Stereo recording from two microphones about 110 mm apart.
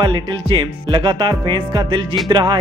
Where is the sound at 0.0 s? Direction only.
45° right (ahead or behind).